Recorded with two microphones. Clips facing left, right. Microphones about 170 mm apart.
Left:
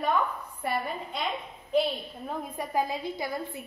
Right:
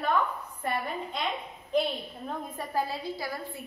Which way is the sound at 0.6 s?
10° left (ahead or behind).